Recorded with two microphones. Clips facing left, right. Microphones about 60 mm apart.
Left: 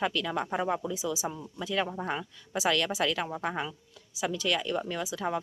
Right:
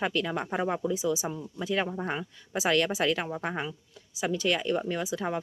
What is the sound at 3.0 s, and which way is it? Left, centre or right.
Speech, centre.